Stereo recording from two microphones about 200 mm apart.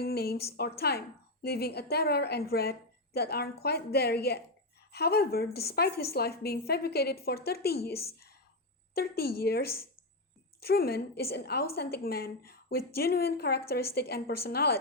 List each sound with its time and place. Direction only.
0.0 s a woman's voice: 50° left (ahead or behind)